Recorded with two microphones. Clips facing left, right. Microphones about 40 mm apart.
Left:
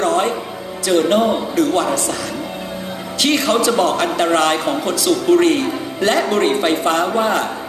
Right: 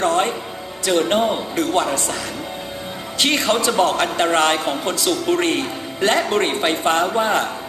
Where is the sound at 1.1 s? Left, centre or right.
Right.